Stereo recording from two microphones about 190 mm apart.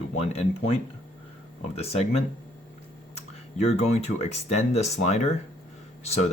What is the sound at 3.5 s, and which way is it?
Speech, 35° left (ahead or behind).